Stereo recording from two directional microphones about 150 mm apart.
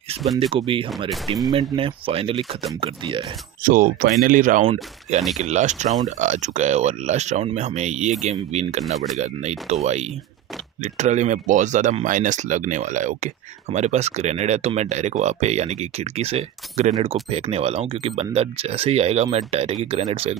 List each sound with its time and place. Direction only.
0.4 s speech: 35° right (ahead or behind)
1.1 s speech: centre (ahead or behind)
1.5 s speech: 35° right (ahead or behind)
3.6 s speech: 70° right (ahead or behind)
5.4 s speech: 50° right (ahead or behind)